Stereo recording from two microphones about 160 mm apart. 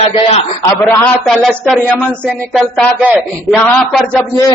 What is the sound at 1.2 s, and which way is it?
Speech, centre (ahead or behind).